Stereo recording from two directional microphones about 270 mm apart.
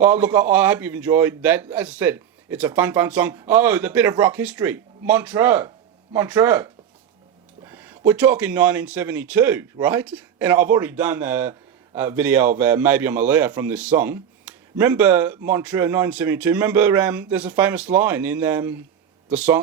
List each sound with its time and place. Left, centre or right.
0.0 s a man's voice: centre